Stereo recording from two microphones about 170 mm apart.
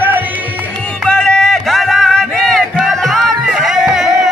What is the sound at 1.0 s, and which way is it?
Music, 5° left (ahead or behind).